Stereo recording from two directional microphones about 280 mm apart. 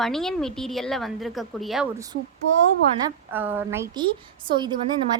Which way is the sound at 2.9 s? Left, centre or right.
Centre.